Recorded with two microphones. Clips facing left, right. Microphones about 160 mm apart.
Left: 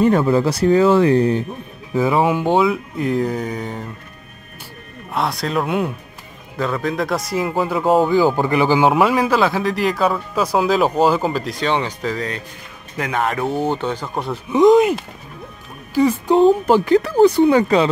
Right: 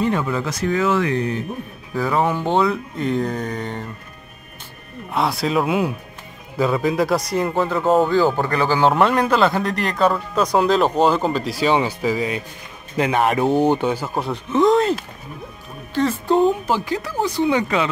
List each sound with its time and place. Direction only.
0.0 s speech: 40° left (ahead or behind)
2.0 s speech: 15° left (ahead or behind)
5.1 s speech: centre (ahead or behind)
8.4 s speech: 15° left (ahead or behind)
8.9 s speech: 5° left (ahead or behind)
14.5 s speech: 15° left (ahead or behind)
16.6 s speech: 60° left (ahead or behind); by 17.8 s 40° left (ahead or behind)